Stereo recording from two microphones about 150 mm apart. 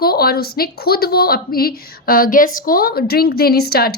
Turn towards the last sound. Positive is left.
turn(degrees=90)